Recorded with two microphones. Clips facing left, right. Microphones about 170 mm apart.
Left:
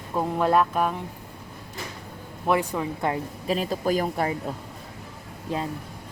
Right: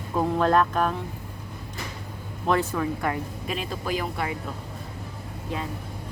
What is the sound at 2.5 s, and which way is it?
Speech, 10° left (ahead or behind).